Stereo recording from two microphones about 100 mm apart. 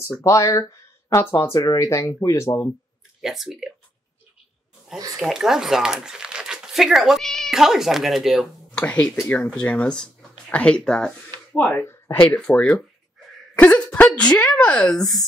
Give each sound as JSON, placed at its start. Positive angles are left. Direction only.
{"t": 0.2, "sound": "speech", "side_deg": 30}
{"t": 3.2, "sound": "speech", "side_deg": -5}
{"t": 5.1, "sound": "speech", "side_deg": 0}
{"t": 8.7, "sound": "speech", "side_deg": 10}
{"t": 12.5, "sound": "speech", "side_deg": 10}
{"t": 13.6, "sound": "a sound", "side_deg": 15}
{"t": 14.1, "sound": "speech", "side_deg": 10}